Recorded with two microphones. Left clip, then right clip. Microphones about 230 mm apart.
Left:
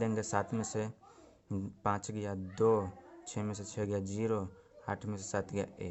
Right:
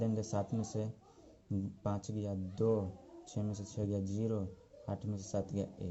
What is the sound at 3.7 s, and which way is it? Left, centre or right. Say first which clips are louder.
Speech: left 4 dB; left.